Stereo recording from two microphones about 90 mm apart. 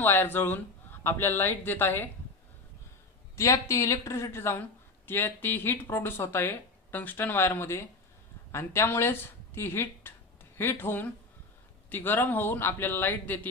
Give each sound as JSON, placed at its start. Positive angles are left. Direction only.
{"t": 0.0, "sound": "speech", "side_deg": 25}
{"t": 3.3, "sound": "speech", "side_deg": 35}